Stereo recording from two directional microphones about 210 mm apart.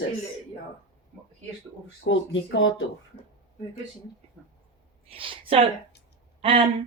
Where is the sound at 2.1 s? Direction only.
60° left (ahead or behind).